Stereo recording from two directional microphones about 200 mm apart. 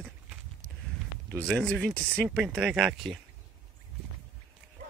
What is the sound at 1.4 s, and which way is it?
Speech, 5° left (ahead or behind).